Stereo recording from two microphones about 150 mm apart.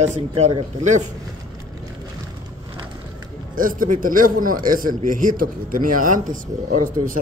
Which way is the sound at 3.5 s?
65° right (ahead or behind).